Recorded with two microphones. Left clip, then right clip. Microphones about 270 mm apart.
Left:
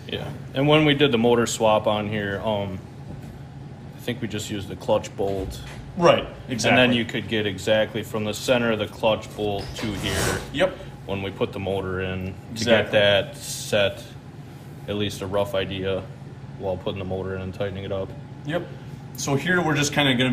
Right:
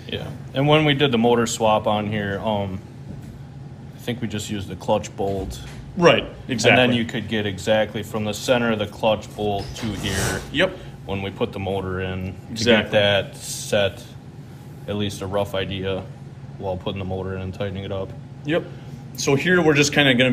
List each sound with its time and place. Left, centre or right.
0.1 s speech: right
4.0 s speech: right
5.9 s speech: centre
6.8 s speech: right
10.5 s speech: centre
11.1 s speech: right
19.1 s speech: centre